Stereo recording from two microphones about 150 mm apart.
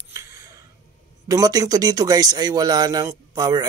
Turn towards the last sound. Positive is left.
turn(degrees=-25)  # may be behind; listen again after turning